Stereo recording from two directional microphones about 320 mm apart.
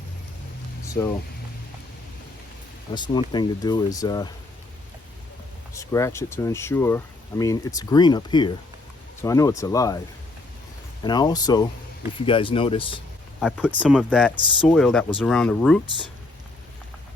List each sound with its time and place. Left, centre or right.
1.0 s speech: centre
2.9 s speech: centre
5.7 s speech: centre
11.0 s speech: centre
13.4 s speech: centre